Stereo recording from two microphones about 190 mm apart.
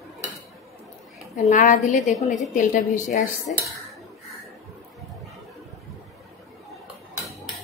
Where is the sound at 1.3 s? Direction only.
40° left (ahead or behind).